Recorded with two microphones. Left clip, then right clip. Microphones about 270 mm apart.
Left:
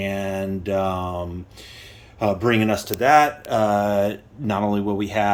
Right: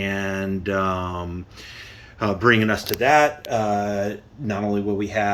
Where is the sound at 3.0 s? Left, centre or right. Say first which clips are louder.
Left 2 dB; left.